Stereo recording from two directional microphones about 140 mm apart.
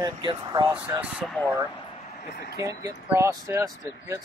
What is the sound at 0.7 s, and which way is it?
Speech, 15° right (ahead or behind).